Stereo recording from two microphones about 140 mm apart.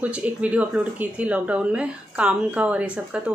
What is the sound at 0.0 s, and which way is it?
Speech, 10° right (ahead or behind).